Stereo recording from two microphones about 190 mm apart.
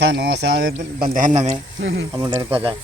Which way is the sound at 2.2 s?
10° right (ahead or behind).